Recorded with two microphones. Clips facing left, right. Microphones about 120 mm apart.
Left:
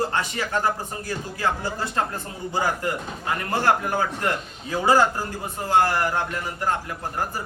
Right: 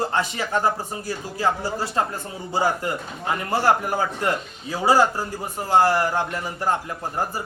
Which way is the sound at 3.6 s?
15° right (ahead or behind).